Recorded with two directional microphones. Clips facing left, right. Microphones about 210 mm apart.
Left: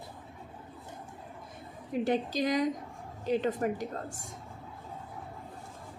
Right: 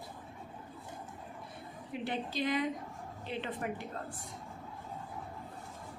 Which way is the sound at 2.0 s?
40° left (ahead or behind).